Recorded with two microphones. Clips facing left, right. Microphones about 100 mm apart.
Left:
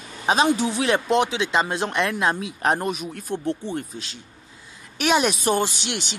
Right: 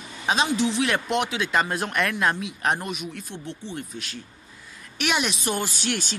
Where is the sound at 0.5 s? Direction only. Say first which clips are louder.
Left 1 dB; 40° left (ahead or behind).